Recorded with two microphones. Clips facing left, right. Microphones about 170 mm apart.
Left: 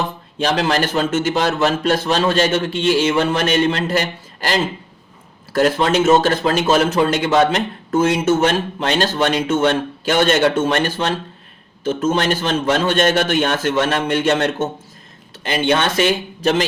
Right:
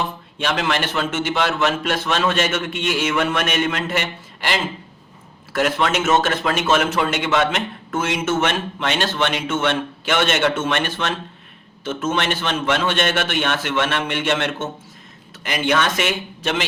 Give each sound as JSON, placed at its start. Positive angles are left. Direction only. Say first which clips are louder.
{"t": 0.3, "sound": "a man's voice", "louder": "left 4 dB", "side_deg": 35}